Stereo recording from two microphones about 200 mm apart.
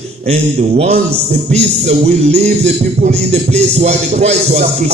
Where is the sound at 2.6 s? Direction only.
35° right (ahead or behind).